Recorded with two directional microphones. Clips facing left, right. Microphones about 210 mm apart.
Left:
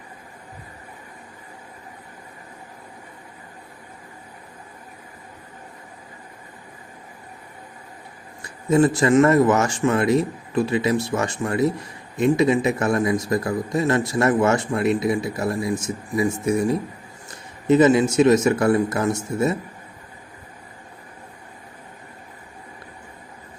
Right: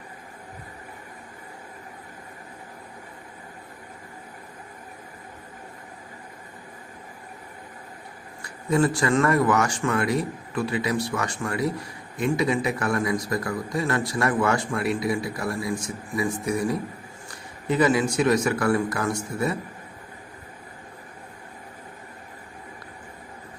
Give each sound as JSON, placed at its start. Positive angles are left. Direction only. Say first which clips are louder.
{"t": 8.4, "sound": "a man's voice", "louder": "left 5 dB", "side_deg": 20}